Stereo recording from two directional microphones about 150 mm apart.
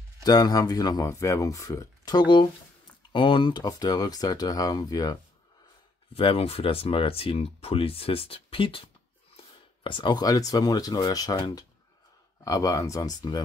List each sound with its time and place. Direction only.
0.2 s speech: 25° left (ahead or behind)
6.1 s speech: 40° left (ahead or behind)